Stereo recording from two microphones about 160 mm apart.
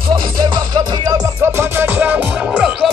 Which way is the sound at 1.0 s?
20° right (ahead or behind).